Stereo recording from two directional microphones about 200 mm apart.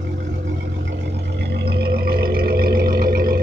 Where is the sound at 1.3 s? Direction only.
55° right (ahead or behind).